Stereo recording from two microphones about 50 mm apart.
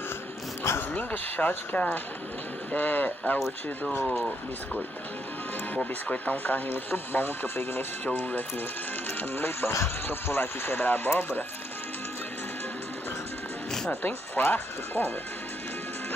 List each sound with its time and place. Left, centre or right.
0.9 s speech: left
4.0 s speech: centre
5.8 s speech: left
6.7 s speech: left
8.0 s speech: left
9.3 s speech: left
14.0 s speech: left